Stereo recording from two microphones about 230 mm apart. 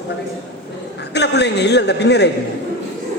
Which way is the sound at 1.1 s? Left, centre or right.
Left.